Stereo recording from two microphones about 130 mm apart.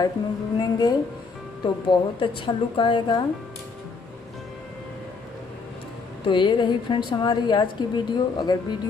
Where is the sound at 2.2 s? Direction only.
40° left (ahead or behind).